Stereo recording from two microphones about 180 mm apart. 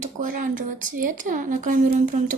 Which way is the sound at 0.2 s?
45° right (ahead or behind).